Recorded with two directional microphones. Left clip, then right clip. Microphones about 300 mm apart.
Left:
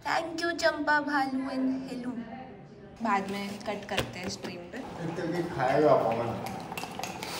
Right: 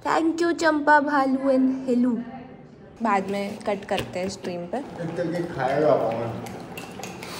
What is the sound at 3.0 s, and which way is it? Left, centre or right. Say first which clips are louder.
A woman's voice: right 6 dB; centre.